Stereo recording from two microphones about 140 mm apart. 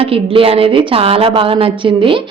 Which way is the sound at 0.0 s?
40° right (ahead or behind).